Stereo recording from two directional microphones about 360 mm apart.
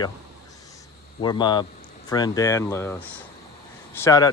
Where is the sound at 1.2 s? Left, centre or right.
Centre.